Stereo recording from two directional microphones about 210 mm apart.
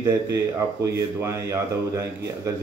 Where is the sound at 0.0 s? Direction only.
15° right (ahead or behind).